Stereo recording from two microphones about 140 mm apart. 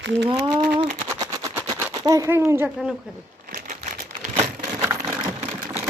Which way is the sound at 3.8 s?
65° right (ahead or behind).